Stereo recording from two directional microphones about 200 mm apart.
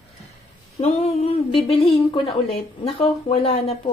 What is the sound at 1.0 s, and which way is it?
Speech, 30° left (ahead or behind).